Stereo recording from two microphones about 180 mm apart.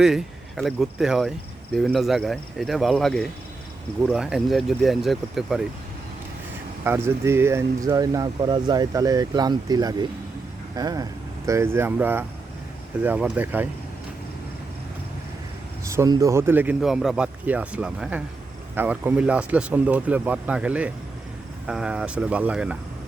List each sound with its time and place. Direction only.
0.0 s speech: centre (ahead or behind)
6.8 s a man's voice: 15° right (ahead or behind)
15.8 s a man's voice: 15° right (ahead or behind)